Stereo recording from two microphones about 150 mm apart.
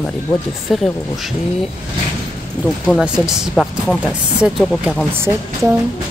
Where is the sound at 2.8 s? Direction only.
5° right (ahead or behind).